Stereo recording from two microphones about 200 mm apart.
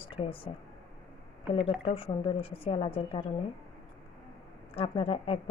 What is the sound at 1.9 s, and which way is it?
A woman's voice, 30° left (ahead or behind).